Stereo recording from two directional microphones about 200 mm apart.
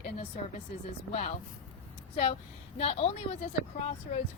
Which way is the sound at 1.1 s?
35° left (ahead or behind).